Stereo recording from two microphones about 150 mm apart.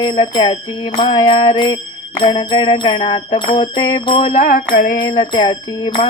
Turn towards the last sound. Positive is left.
turn(degrees=35)  # may be behind; listen again after turning